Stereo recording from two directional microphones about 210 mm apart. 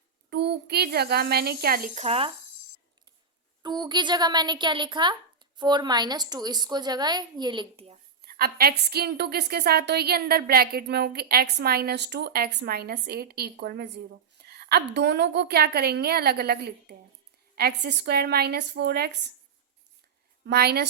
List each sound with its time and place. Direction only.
0.3 s a woman's voice: 50° right (ahead or behind); by 2.3 s 30° right (ahead or behind)
3.6 s a woman's voice: 20° right (ahead or behind)
8.2 s a woman's voice: 45° right (ahead or behind)
20.4 s a woman's voice: 50° right (ahead or behind)